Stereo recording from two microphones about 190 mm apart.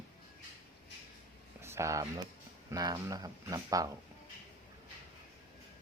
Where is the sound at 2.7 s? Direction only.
20° right (ahead or behind).